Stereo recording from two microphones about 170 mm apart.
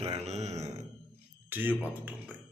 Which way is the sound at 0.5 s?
20° right (ahead or behind).